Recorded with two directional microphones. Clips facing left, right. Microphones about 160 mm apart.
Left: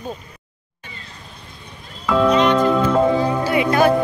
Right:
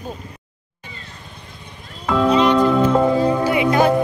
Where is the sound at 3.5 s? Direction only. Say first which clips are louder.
Left 3 dB; 15° right (ahead or behind).